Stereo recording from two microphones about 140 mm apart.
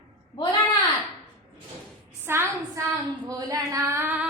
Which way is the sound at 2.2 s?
15° right (ahead or behind).